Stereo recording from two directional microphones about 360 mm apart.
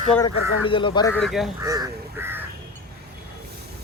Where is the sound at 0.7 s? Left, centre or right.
Centre.